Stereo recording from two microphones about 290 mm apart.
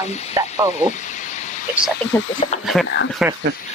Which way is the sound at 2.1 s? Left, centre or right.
Centre.